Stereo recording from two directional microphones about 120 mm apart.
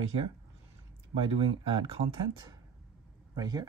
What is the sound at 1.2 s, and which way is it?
Speech, 50° right (ahead or behind).